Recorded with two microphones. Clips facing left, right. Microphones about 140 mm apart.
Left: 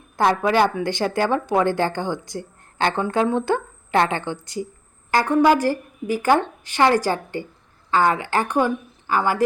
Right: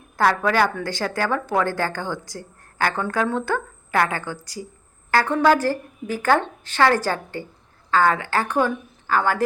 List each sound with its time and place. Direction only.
0.2 s a woman's voice: 20° left (ahead or behind)